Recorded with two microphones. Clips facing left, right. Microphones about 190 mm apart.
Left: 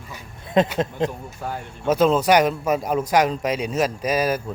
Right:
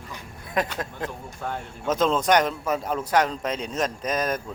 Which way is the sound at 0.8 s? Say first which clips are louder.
Left 9 dB; 20° left (ahead or behind).